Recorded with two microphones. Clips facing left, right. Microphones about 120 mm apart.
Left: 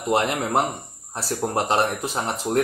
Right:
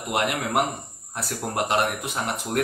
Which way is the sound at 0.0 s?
30° left (ahead or behind).